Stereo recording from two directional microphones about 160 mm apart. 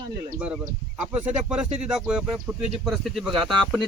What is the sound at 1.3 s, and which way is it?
Speech, 5° right (ahead or behind).